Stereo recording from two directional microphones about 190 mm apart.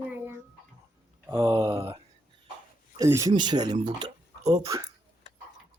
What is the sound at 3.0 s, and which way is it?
Speech, 15° right (ahead or behind).